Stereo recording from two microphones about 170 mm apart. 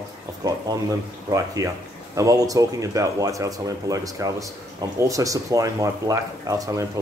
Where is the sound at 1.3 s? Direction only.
20° right (ahead or behind).